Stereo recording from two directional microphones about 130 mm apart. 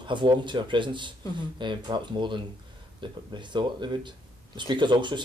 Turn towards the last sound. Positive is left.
turn(degrees=-35)  # may be behind; listen again after turning